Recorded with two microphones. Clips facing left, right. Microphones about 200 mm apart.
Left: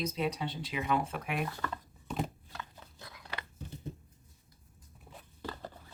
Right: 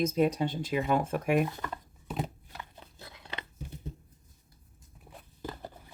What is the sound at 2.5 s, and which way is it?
Biting, 25° right (ahead or behind).